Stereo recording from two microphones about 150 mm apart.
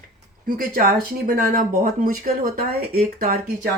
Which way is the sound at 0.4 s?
70° right (ahead or behind).